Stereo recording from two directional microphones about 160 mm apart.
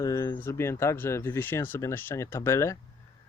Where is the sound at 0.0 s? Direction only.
20° left (ahead or behind).